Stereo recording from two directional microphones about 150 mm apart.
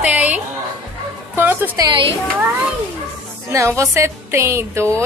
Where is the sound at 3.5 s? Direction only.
20° right (ahead or behind).